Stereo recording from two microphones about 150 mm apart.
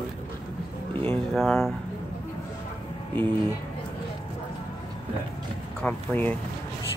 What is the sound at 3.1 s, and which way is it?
Speech, 10° left (ahead or behind).